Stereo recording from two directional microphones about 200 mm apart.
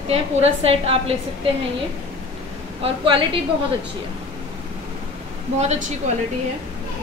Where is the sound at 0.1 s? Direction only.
30° right (ahead or behind).